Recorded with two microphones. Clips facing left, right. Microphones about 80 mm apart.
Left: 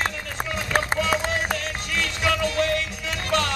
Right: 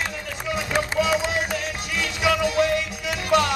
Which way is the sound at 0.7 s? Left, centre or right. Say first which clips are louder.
Left 1 dB; left.